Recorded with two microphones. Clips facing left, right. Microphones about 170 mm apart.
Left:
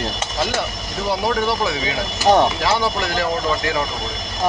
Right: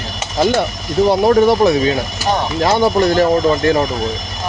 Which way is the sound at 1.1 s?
45° right (ahead or behind).